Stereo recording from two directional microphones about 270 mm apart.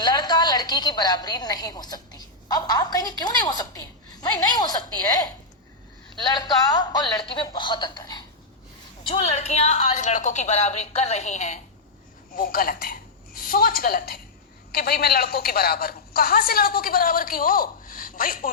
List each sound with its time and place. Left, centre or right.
0.0 s a woman's voice: centre; by 18.5 s left